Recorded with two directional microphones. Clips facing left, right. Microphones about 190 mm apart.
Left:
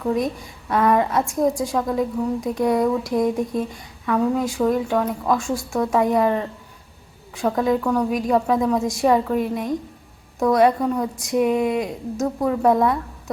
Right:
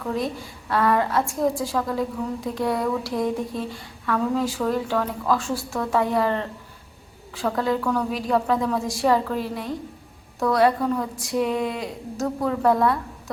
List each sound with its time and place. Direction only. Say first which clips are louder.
0.0 s a woman's voice: left 4 dB; 20° left (ahead or behind)